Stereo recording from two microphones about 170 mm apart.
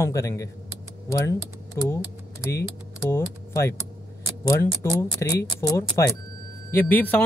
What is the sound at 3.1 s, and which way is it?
A man's voice, 15° left (ahead or behind).